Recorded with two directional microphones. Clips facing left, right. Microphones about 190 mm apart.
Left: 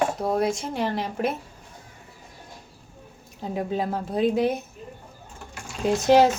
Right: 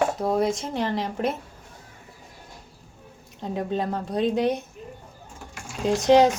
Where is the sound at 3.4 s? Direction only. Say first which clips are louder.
Even; 5° left (ahead or behind).